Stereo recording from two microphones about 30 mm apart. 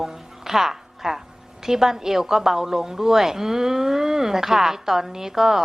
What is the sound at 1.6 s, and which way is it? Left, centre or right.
A woman's voice, centre.